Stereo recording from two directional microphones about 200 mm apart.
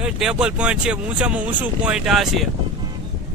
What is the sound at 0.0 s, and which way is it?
Speech, 5° right (ahead or behind).